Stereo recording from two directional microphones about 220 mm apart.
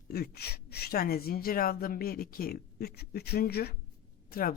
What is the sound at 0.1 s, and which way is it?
Speech, 45° left (ahead or behind).